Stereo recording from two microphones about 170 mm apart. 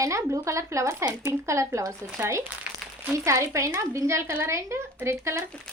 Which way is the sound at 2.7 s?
5° right (ahead or behind).